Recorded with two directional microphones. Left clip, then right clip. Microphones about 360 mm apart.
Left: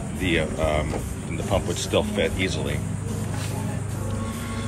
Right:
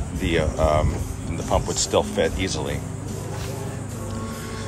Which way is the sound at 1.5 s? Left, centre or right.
Centre.